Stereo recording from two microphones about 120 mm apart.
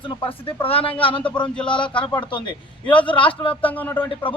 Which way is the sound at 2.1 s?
40° left (ahead or behind).